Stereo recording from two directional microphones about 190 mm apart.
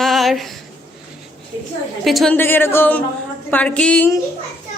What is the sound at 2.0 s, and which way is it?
Speech, centre (ahead or behind).